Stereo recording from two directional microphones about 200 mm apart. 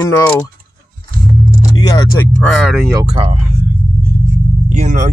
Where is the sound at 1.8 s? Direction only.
20° left (ahead or behind).